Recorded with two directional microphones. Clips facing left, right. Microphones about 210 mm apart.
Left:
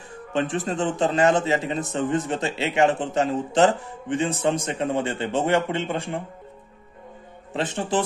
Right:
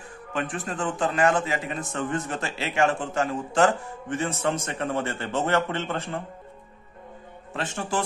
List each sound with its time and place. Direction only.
0.3 s a man's voice: 25° left (ahead or behind)
7.5 s a man's voice: 20° left (ahead or behind)